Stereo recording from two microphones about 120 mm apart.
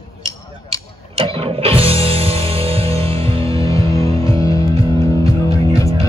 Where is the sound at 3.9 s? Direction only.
25° left (ahead or behind).